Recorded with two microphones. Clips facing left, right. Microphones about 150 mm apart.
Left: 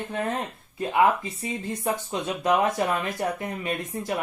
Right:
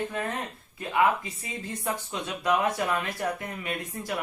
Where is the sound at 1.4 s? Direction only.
25° left (ahead or behind).